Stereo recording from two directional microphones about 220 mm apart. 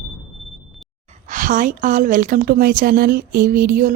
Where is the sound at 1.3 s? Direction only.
35° right (ahead or behind).